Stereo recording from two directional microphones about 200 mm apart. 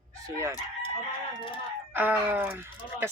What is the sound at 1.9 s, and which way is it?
Speech, 10° right (ahead or behind).